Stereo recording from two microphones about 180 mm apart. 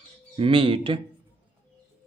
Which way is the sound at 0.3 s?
30° right (ahead or behind).